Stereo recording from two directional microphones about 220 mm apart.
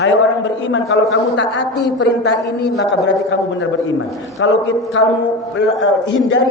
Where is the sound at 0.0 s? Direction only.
55° left (ahead or behind).